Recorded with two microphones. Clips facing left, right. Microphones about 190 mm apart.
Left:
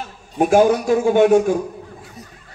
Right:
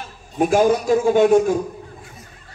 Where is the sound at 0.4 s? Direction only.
50° left (ahead or behind).